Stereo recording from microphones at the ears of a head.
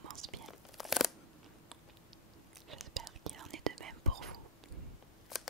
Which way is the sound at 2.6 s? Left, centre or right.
Right.